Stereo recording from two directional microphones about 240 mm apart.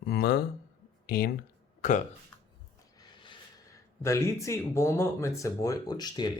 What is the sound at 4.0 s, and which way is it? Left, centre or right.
Speech, centre.